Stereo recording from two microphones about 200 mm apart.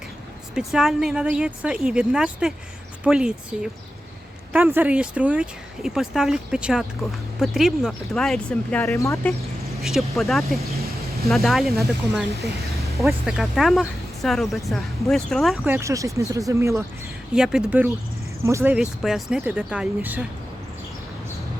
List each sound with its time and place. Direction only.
0.5 s speech: centre (ahead or behind); by 9.3 s 15° left (ahead or behind)
9.8 s speech: centre (ahead or behind)
13.0 s speech: centre (ahead or behind)
15.6 s speech: 15° right (ahead or behind)
17.3 s speech: 5° right (ahead or behind)